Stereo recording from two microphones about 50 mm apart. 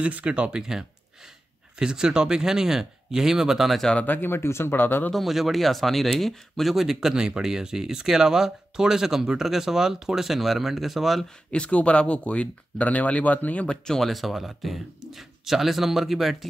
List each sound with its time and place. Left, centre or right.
0.0 s speech: right
0.6 s speech: centre
4.0 s speech: left
5.1 s speech: centre
11.2 s speech: left
13.7 s speech: centre
14.0 s speech: centre